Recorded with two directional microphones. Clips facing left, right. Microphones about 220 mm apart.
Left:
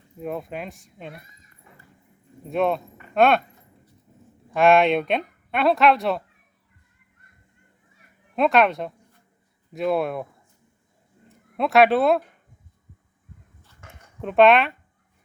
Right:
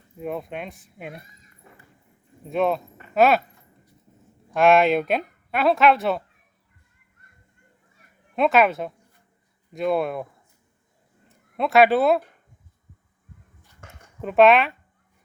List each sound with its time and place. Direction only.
0.2 s speech: centre (ahead or behind)
2.5 s speech: centre (ahead or behind)
4.5 s speech: centre (ahead or behind)
8.4 s speech: centre (ahead or behind)
11.3 s speech: centre (ahead or behind)
14.2 s speech: centre (ahead or behind)